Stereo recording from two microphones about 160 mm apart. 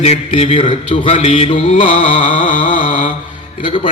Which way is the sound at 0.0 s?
40° left (ahead or behind).